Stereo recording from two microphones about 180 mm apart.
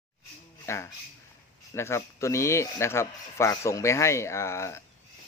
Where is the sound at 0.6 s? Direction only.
15° left (ahead or behind).